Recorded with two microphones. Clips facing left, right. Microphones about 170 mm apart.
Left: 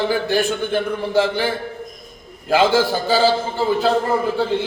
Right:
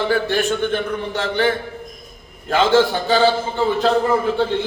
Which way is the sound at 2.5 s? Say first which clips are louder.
Right 1 dB; 10° left (ahead or behind).